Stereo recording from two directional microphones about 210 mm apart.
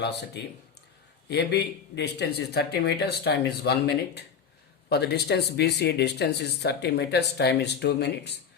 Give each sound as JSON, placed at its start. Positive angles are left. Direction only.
{"t": 0.4, "sound": "speech", "side_deg": 50}